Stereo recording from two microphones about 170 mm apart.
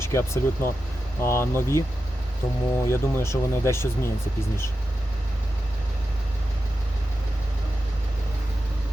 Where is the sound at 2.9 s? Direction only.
15° left (ahead or behind).